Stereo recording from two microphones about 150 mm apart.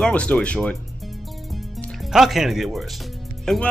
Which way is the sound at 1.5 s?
Centre (ahead or behind).